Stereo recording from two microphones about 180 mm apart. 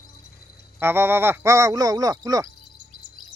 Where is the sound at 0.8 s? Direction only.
15° right (ahead or behind).